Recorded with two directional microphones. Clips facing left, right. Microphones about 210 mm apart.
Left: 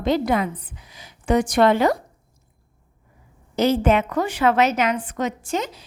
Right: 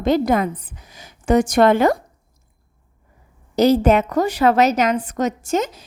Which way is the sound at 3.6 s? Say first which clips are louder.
Right 4 dB; 40° right (ahead or behind).